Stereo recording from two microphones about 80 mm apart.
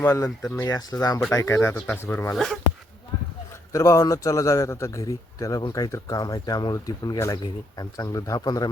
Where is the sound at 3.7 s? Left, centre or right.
Left.